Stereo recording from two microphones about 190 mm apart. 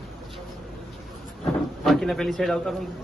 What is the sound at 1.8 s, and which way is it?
A man's voice, centre (ahead or behind).